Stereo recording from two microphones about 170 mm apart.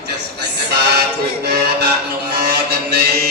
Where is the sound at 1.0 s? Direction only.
70° right (ahead or behind).